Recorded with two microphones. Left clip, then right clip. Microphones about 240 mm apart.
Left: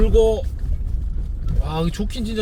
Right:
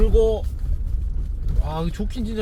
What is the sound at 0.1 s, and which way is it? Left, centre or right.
Speech, left.